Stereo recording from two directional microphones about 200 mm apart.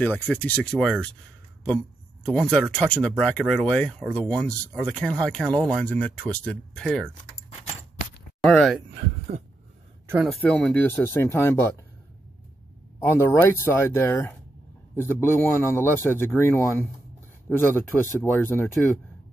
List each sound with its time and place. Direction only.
0.0 s a man's voice: 10° left (ahead or behind)
2.2 s speech: 5° left (ahead or behind)
8.4 s speech: centre (ahead or behind)
9.3 s a sound: 45° right (ahead or behind)
10.0 s speech: 5° right (ahead or behind)
10.4 s a man's voice: 5° left (ahead or behind)
13.0 s a man's voice: 15° left (ahead or behind)